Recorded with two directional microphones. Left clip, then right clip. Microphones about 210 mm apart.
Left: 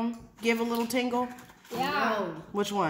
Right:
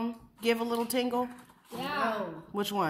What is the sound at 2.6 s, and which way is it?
Speech, 20° right (ahead or behind).